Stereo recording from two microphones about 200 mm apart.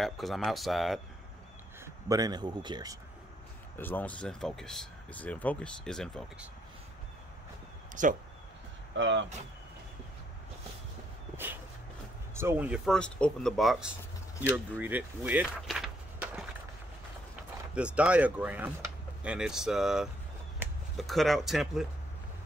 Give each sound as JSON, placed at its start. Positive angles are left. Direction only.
{"t": 0.0, "sound": "speech", "side_deg": 0}
{"t": 2.0, "sound": "a man's voice", "side_deg": -20}
{"t": 3.7, "sound": "speech", "side_deg": 10}
{"t": 7.9, "sound": "speech", "side_deg": -40}
{"t": 8.9, "sound": "speech", "side_deg": -65}
{"t": 12.4, "sound": "speech", "side_deg": -10}
{"t": 17.7, "sound": "speech", "side_deg": -5}
{"t": 20.6, "sound": "a sound", "side_deg": -10}
{"t": 21.0, "sound": "speech", "side_deg": 0}